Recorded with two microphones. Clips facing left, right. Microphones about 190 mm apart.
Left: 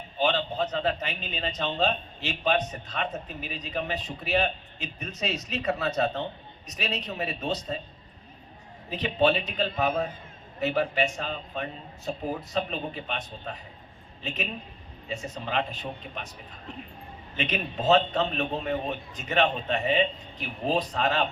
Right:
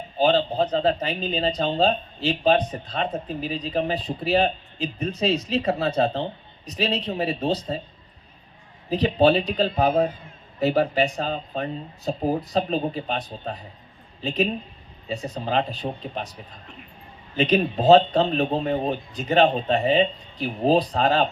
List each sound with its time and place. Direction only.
0.2 s a man's voice: 35° right (ahead or behind)
8.9 s a man's voice: 35° right (ahead or behind)
17.3 s a man's voice: 35° right (ahead or behind)